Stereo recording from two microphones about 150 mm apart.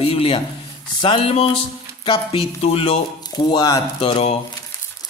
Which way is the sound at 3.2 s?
30° left (ahead or behind).